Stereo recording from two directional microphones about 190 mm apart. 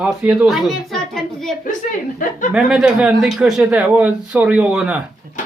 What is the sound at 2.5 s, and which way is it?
Speech, 5° right (ahead or behind).